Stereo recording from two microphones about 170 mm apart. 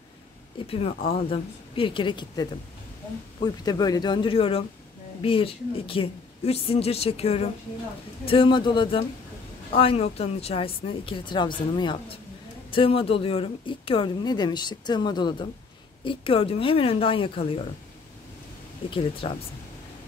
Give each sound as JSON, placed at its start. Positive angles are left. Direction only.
{"t": 0.7, "sound": "speech", "side_deg": 35}
{"t": 18.9, "sound": "speech", "side_deg": 30}